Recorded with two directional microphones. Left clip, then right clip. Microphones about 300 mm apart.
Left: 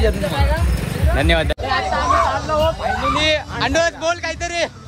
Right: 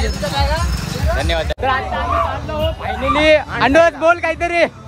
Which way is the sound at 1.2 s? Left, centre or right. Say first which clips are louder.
Left 5 dB; left.